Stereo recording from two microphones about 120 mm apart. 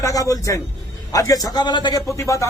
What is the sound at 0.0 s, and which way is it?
A man's voice, 30° left (ahead or behind).